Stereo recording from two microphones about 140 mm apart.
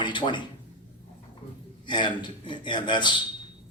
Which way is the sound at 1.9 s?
35° left (ahead or behind).